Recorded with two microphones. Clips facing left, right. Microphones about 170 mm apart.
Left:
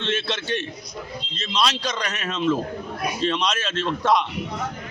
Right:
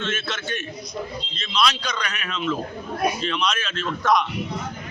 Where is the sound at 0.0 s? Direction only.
30° left (ahead or behind).